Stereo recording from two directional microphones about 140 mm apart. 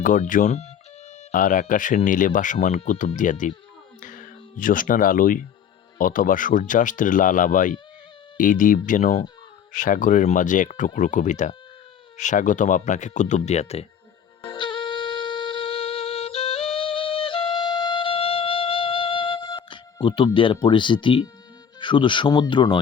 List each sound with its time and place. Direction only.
0.0 s speech: 70° left (ahead or behind); by 0.7 s 55° left (ahead or behind)
1.3 s speech: 75° left (ahead or behind); by 13.8 s 50° left (ahead or behind)
14.4 s music: 35° left (ahead or behind)
21.8 s speech: 35° left (ahead or behind)